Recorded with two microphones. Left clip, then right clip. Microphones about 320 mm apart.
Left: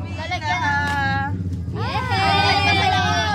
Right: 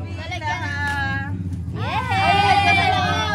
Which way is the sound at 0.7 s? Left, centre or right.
Left.